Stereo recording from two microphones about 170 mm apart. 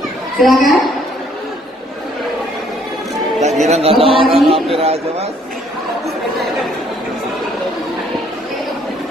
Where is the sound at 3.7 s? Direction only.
35° right (ahead or behind).